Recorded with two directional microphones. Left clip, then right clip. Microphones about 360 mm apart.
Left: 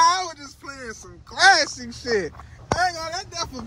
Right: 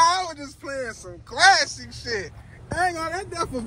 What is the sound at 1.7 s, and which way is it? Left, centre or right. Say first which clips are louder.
Speech: left 5 dB; left.